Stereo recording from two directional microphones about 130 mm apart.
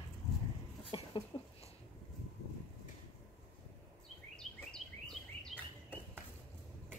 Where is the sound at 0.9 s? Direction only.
45° left (ahead or behind).